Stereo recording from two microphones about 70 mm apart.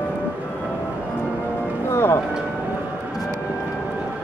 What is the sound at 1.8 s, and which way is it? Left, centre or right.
Music, left.